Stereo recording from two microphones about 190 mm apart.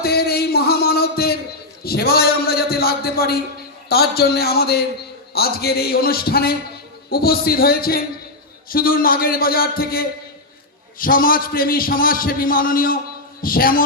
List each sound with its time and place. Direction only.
0.0 s music: 55° left (ahead or behind)
1.8 s a man's voice: 55° left (ahead or behind)